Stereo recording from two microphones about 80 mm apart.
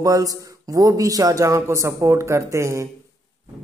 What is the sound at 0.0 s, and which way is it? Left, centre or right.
Mantra, right.